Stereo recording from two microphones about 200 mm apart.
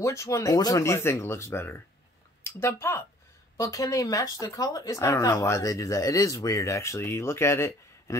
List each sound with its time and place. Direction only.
0.0 s speech: 15° left (ahead or behind)